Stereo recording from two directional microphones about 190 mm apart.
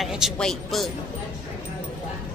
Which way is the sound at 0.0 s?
Centre (ahead or behind).